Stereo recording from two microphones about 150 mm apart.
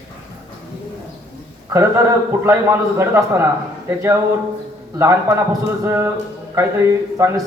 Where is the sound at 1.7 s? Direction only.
20° right (ahead or behind).